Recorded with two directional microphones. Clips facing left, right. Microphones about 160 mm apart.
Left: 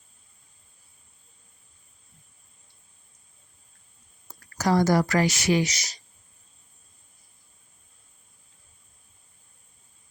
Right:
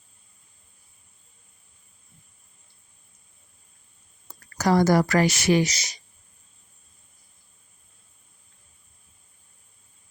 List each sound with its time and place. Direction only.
4.5 s speech: 65° right (ahead or behind)